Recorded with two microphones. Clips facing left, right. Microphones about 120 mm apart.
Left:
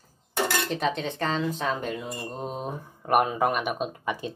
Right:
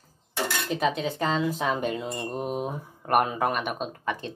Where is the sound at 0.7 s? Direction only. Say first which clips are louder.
Right 1 dB; 5° right (ahead or behind).